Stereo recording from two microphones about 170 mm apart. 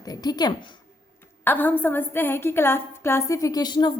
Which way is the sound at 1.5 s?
10° left (ahead or behind).